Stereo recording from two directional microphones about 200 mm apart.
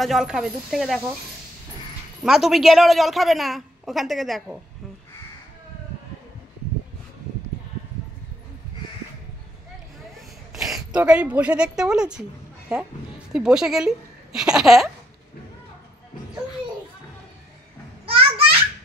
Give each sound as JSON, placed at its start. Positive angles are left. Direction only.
{"t": 0.0, "sound": "speech", "side_deg": 0}
{"t": 2.2, "sound": "speech", "side_deg": 0}
{"t": 10.5, "sound": "speech", "side_deg": 0}
{"t": 18.0, "sound": "a sound", "side_deg": -25}